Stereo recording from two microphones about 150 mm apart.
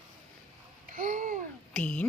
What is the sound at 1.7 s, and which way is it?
Speech, 5° left (ahead or behind).